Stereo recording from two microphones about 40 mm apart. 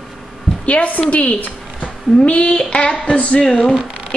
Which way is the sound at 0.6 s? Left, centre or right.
Left.